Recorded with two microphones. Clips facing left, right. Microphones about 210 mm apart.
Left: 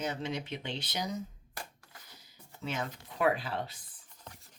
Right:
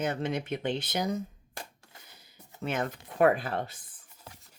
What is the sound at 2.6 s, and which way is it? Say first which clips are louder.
Speech: right 5 dB; 55° right (ahead or behind).